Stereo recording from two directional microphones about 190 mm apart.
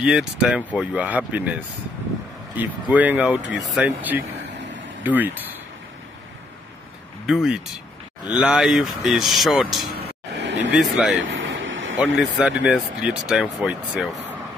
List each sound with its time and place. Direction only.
0.0 s speech: 5° right (ahead or behind)
7.2 s speech: centre (ahead or behind)
10.0 s a sound: 70° right (ahead or behind)
10.8 s speech: centre (ahead or behind)
11.2 s vehicle: 85° right
12.2 s speech: 5° right (ahead or behind)